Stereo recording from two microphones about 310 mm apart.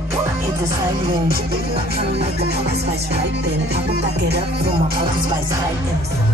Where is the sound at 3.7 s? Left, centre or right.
Right.